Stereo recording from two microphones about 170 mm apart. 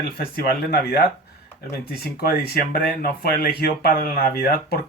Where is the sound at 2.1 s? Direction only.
65° left (ahead or behind).